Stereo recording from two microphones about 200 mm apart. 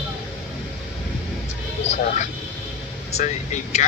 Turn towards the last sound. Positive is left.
turn(degrees=35)  # may be behind; listen again after turning